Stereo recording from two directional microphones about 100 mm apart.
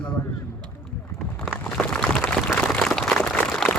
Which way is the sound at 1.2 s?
5° left (ahead or behind).